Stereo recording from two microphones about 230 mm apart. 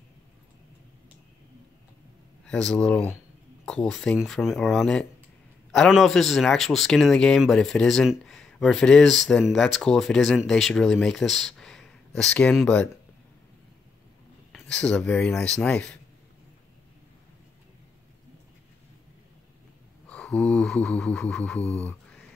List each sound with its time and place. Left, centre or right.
2.4 s speech: centre
14.5 s speech: centre
20.1 s speech: centre
21.5 s a sound: left